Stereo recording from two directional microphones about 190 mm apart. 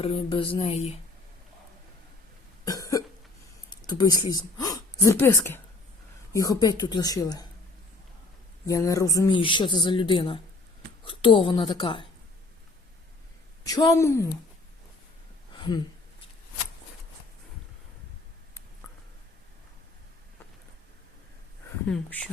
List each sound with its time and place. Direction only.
0.0 s speech: 30° left (ahead or behind)
2.6 s cough: 20° left (ahead or behind)
3.7 s a sound: 20° left (ahead or behind)
5.1 s a woman's voice: 10° left (ahead or behind)
8.6 s speech: 15° left (ahead or behind)
13.7 s a woman's voice: 20° left (ahead or behind)
15.5 s a sound: 25° left (ahead or behind)
21.8 s speech: 5° left (ahead or behind)